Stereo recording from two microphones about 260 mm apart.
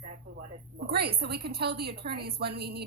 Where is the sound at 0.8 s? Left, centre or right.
Right.